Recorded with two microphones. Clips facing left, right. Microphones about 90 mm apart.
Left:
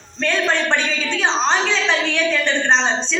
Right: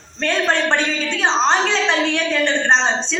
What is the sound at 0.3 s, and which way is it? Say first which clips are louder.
A woman's voice: right 2 dB; 35° right (ahead or behind).